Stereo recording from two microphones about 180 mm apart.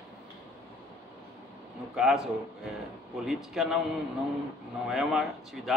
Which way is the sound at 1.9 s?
5° right (ahead or behind).